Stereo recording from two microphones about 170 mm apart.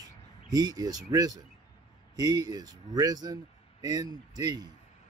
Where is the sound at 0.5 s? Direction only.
20° right (ahead or behind).